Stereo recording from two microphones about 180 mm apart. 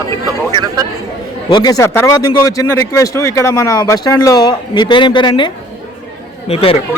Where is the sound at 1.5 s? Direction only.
25° left (ahead or behind).